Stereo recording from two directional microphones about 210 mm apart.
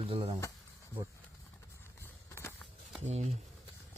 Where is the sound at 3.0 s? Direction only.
30° right (ahead or behind).